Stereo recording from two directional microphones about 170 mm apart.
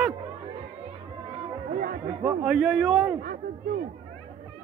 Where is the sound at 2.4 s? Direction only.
Centre (ahead or behind).